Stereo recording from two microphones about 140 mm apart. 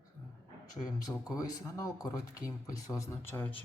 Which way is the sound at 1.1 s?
25° left (ahead or behind).